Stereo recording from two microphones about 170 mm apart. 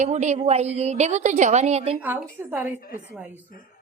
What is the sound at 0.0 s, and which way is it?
A woman's voice, 45° right (ahead or behind).